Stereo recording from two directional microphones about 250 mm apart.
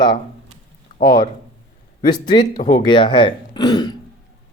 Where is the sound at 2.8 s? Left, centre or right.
Centre.